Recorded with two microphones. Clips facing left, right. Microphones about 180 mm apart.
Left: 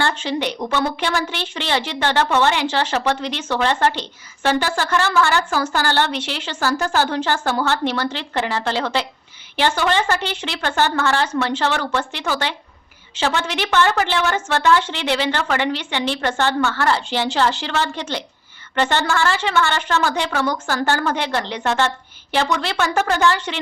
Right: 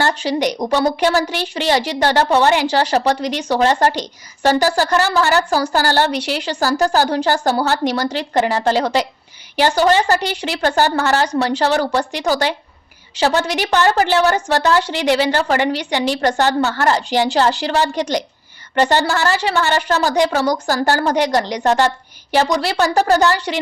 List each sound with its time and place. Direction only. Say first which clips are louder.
0.4 s a woman's voice: right 6 dB; 35° right (ahead or behind)
3.2 s a woman's voice: right 5 dB; 10° right (ahead or behind)
3.5 s a woman's voice: right 4 dB; 40° right (ahead or behind)
6.1 s a woman's voice: right 5 dB; 10° right (ahead or behind)
6.4 s a woman's voice: right 4 dB; 40° right (ahead or behind)
17.1 s a woman's voice: right 5 dB; 10° right (ahead or behind)
17.6 s a woman's voice: right 5 dB; 40° right (ahead or behind)
17.9 s a woman's voice: right 7 dB; 15° right (ahead or behind)
18.7 s a woman's voice: right 4 dB; 40° right (ahead or behind)